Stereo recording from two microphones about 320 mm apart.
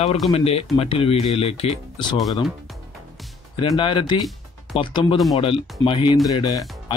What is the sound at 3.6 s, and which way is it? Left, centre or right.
Speech, centre.